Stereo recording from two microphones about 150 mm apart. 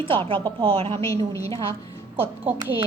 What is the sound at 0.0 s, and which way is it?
A woman's voice, 35° right (ahead or behind).